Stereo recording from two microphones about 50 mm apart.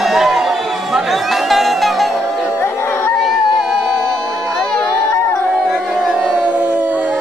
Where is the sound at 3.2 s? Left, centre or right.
Centre.